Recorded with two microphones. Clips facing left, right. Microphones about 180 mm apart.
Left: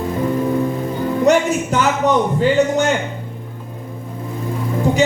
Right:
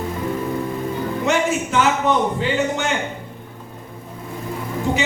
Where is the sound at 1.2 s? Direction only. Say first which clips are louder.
Left 6 dB; 40° left (ahead or behind).